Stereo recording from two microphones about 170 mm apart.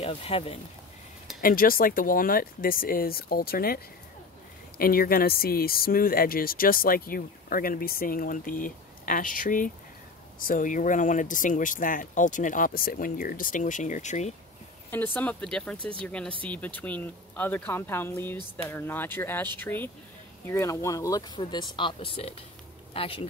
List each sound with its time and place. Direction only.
0.0 s speech: 35° left (ahead or behind)
1.4 s speech: 60° left (ahead or behind)
15.1 s speech: 5° left (ahead or behind); by 23.2 s 30° left (ahead or behind)